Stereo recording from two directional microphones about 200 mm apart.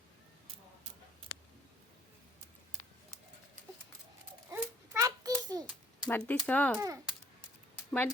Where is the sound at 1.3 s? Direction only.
55° left (ahead or behind).